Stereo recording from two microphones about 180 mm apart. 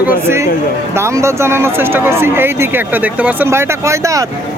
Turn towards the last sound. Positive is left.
turn(degrees=-15)  # may be behind; listen again after turning